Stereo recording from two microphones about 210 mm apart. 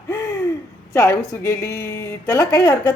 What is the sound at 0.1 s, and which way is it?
Hoot, 15° left (ahead or behind).